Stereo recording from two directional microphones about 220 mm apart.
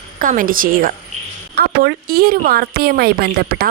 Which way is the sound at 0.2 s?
40° right (ahead or behind).